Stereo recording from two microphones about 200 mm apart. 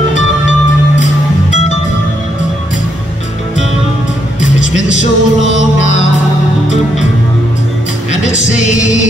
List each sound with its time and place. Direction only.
4.8 s music: 35° left (ahead or behind)